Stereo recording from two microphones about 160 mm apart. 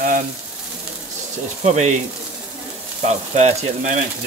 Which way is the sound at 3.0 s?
45° right (ahead or behind).